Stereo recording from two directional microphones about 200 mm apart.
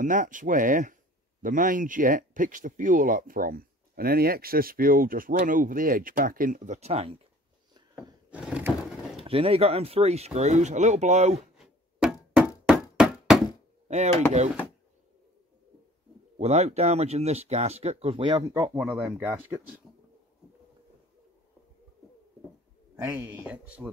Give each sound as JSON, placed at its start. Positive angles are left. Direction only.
{"t": 0.0, "sound": "speech", "side_deg": -40}
{"t": 8.3, "sound": "wood", "side_deg": -5}
{"t": 9.2, "sound": "speech", "side_deg": -30}
{"t": 11.5, "sound": "a sound", "side_deg": 0}
{"t": 12.6, "sound": "knock", "side_deg": 0}
{"t": 13.8, "sound": "speech", "side_deg": -35}
{"t": 16.3, "sound": "speech", "side_deg": -30}
{"t": 18.8, "sound": "speech", "side_deg": 0}
{"t": 22.9, "sound": "speech", "side_deg": -15}